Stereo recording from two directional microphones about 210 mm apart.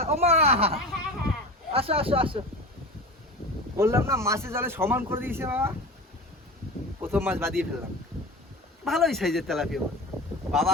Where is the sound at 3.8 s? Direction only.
10° right (ahead or behind).